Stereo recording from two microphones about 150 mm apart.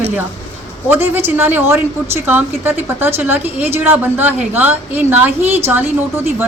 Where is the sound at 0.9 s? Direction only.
15° right (ahead or behind).